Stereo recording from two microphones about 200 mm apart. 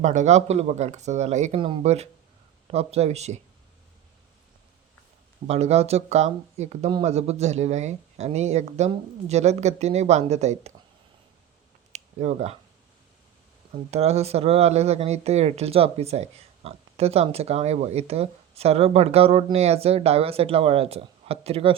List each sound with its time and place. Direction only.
0.0 s speech: 35° right (ahead or behind)
5.5 s speech: 30° right (ahead or behind)
11.9 s a sound: 35° right (ahead or behind)
13.9 s speech: 30° right (ahead or behind)